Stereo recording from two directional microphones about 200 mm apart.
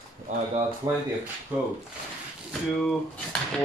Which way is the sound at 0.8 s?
20° right (ahead or behind).